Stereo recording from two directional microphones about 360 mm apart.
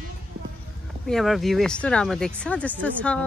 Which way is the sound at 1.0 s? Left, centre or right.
Centre.